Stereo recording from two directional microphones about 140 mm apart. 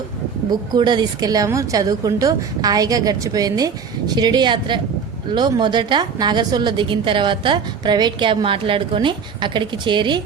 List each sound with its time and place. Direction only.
0.7 s a woman's voice: 35° right (ahead or behind)